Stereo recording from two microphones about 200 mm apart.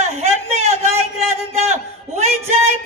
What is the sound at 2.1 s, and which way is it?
Speech, 35° right (ahead or behind).